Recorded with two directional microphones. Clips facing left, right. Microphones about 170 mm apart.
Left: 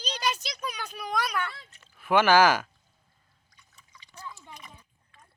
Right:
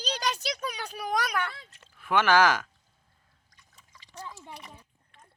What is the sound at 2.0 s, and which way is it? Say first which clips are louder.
Speech: left 2 dB; 5° left (ahead or behind).